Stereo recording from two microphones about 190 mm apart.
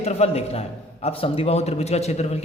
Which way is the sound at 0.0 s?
35° left (ahead or behind).